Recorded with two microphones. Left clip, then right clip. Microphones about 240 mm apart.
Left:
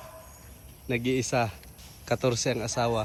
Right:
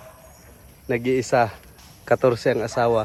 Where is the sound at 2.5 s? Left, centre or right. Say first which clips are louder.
Right 8 dB; right.